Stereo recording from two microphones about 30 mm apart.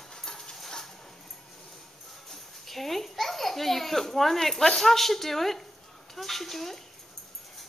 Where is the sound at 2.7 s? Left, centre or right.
Centre.